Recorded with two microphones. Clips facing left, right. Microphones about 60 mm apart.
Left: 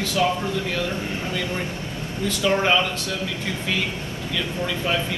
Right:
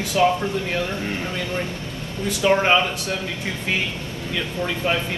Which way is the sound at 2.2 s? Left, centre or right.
Right.